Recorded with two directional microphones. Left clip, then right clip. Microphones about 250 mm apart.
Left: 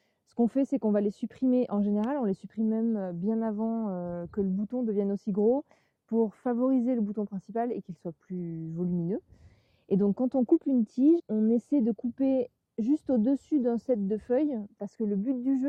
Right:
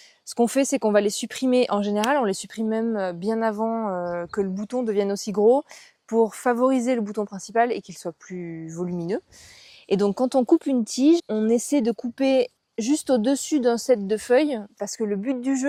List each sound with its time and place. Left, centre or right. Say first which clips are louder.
0.3 s a woman's voice: right 7 dB; centre
3.5 s a woman's voice: right 8 dB; centre
5.4 s a woman's voice: right 8 dB; right; by 7.0 s centre
7.2 s a woman's voice: right 10 dB; centre
10.2 s a woman's voice: right 7 dB; centre